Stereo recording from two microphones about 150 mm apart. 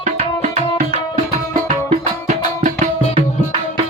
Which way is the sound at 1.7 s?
50° right (ahead or behind).